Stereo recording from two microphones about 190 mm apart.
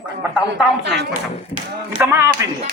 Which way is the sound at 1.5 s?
10° right (ahead or behind).